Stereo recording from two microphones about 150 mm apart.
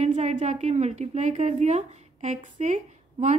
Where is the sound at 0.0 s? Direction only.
50° right (ahead or behind).